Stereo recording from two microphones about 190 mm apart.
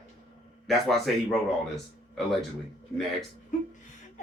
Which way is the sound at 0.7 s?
Centre (ahead or behind).